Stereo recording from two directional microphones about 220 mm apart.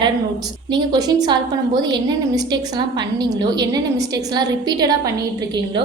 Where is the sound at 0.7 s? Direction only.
20° right (ahead or behind).